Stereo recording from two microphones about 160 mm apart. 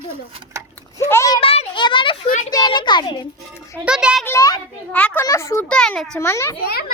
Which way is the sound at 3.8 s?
5° right (ahead or behind).